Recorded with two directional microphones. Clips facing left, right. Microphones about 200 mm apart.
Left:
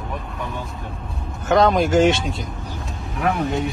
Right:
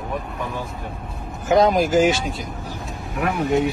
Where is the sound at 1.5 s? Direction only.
Centre (ahead or behind).